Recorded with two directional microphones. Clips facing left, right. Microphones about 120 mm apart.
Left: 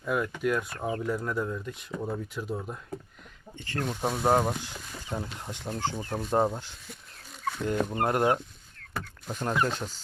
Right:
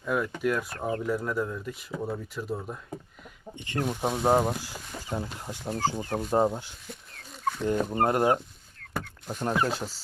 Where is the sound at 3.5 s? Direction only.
15° right (ahead or behind).